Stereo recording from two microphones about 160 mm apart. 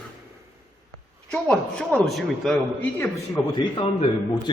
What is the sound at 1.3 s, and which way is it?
Speech, 5° left (ahead or behind).